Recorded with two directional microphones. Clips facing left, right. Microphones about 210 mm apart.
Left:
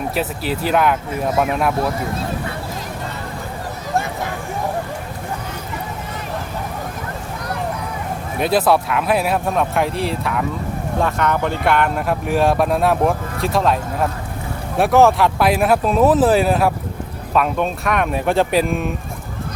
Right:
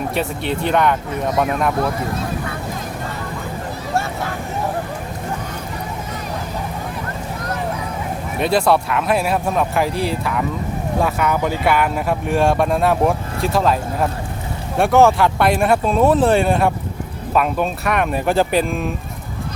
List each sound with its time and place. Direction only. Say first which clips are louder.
0.1 s speech: even; 5° left (ahead or behind)
3.9 s vehicle: left 1 dB; 15° left (ahead or behind)
8.4 s speech: even; centre (ahead or behind)